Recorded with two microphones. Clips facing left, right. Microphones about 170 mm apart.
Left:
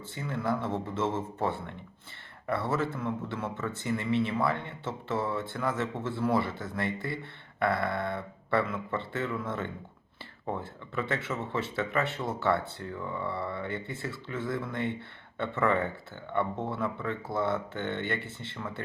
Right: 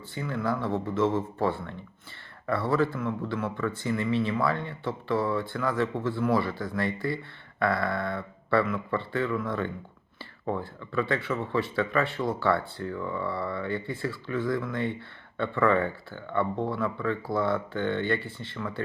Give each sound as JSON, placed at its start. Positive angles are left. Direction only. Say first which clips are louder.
{"t": 0.1, "sound": "speech", "louder": "right 2 dB", "side_deg": 25}